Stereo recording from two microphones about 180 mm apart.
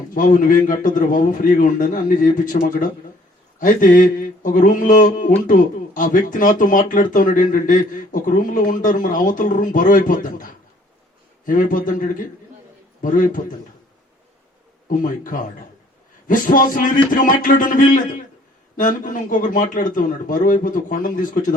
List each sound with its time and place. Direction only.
0.1 s speech: 50° left (ahead or behind)
14.8 s speech: 50° left (ahead or behind)